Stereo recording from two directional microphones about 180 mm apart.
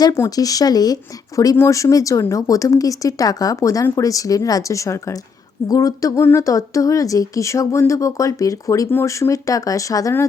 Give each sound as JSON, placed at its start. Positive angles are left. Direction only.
{"t": 0.0, "sound": "speech", "side_deg": 20}